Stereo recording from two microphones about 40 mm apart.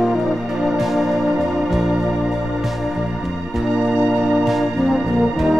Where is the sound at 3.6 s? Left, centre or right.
Centre.